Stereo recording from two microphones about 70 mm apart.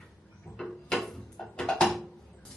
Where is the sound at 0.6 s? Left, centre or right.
Centre.